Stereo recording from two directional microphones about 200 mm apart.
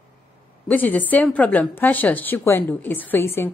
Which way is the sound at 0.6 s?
10° left (ahead or behind).